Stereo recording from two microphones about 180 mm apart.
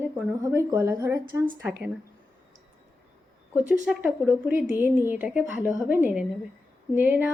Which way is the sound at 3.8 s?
10° right (ahead or behind).